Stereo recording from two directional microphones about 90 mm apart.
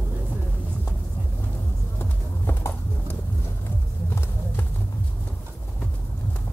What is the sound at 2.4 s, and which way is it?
Horse, 25° left (ahead or behind).